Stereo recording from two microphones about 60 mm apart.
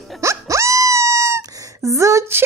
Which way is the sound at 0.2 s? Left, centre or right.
Right.